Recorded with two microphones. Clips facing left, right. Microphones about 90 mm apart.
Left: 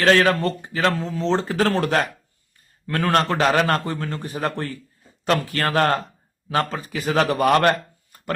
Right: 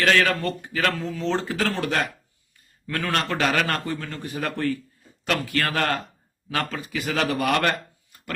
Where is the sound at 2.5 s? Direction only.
40° left (ahead or behind).